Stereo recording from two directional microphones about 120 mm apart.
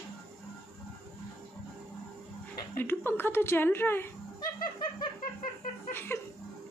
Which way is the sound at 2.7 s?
15° left (ahead or behind).